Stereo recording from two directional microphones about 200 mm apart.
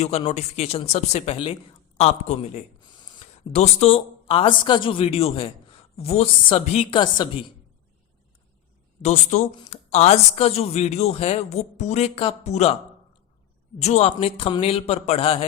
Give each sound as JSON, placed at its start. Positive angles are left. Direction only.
{"t": 0.3, "sound": "speech", "side_deg": 35}
{"t": 3.0, "sound": "a sound", "side_deg": 20}
{"t": 3.5, "sound": "a man's voice", "side_deg": 35}
{"t": 9.0, "sound": "speech", "side_deg": 35}
{"t": 13.8, "sound": "a man's voice", "side_deg": 30}